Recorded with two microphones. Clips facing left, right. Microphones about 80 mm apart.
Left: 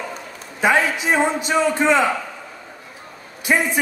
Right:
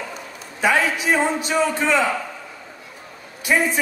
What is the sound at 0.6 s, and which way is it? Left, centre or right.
A man's voice, left.